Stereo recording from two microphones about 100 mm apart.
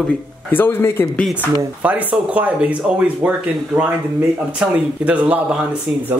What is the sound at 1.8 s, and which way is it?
Speech, 15° right (ahead or behind).